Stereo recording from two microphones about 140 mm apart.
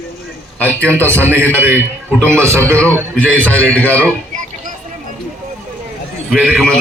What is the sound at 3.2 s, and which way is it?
Speech, 10° left (ahead or behind).